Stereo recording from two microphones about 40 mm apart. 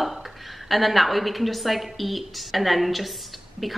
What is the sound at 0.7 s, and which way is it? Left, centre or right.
Speech, centre.